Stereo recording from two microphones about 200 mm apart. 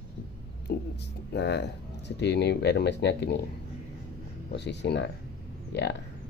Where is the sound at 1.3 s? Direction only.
60° left (ahead or behind).